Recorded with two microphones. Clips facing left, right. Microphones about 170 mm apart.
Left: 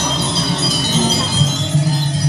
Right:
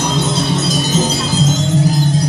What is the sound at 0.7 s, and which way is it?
Wind chime, 45° right (ahead or behind).